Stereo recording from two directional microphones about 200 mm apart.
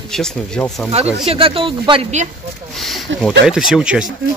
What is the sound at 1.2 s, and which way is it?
Speech, 30° right (ahead or behind).